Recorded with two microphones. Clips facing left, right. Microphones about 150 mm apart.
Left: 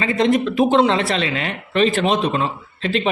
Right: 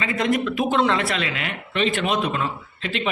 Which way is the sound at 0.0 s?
25° left (ahead or behind).